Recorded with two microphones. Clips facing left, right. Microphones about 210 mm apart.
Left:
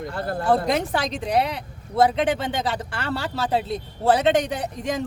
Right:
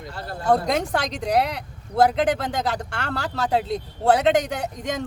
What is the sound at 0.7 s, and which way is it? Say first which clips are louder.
Speech: even; centre (ahead or behind).